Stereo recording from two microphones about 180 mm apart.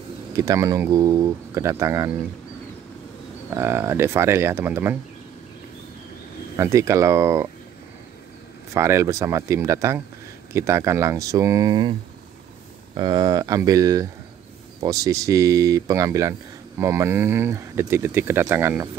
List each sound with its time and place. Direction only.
0.4 s speech: 15° right (ahead or behind)
3.4 s speech: 15° right (ahead or behind)
6.5 s speech: 15° right (ahead or behind)
8.7 s speech: 15° right (ahead or behind)
12.9 s speech: 25° right (ahead or behind)